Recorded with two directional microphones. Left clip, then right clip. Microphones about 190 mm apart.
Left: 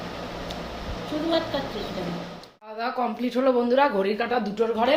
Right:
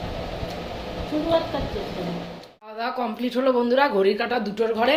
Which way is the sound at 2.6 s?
10° right (ahead or behind).